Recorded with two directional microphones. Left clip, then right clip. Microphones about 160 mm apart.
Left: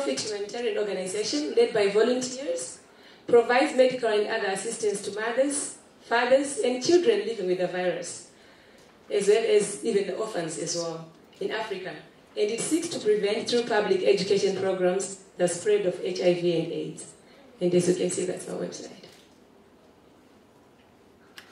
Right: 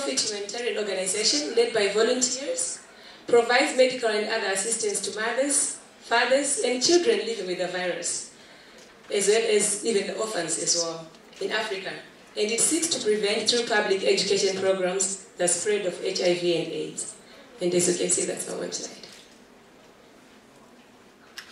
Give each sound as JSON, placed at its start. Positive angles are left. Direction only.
{"t": 0.0, "sound": "speech", "side_deg": -35}
{"t": 3.3, "sound": "speech", "side_deg": -35}
{"t": 9.1, "sound": "speech", "side_deg": -35}